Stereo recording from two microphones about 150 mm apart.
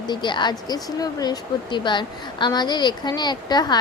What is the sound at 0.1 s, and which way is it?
A woman's voice, 30° left (ahead or behind).